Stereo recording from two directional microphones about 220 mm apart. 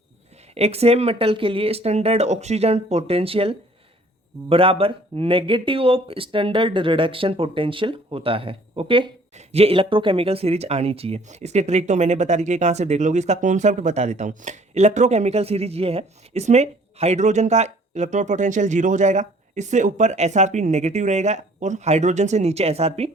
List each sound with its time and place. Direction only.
0.5 s speech: 30° right (ahead or behind)